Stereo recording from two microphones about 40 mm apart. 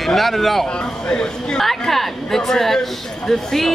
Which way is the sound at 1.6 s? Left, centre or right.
Centre.